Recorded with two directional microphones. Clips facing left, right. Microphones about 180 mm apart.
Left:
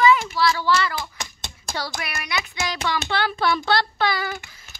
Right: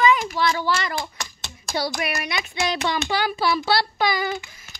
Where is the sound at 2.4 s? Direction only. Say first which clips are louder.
Right 4 dB; 25° right (ahead or behind).